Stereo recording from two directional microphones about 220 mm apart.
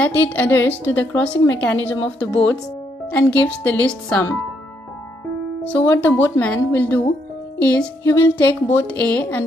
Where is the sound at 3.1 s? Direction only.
5° left (ahead or behind).